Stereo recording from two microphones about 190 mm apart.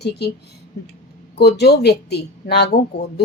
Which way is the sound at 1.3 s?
60° left (ahead or behind).